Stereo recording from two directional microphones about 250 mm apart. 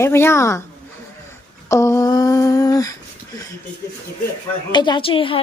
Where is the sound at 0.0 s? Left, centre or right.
Centre.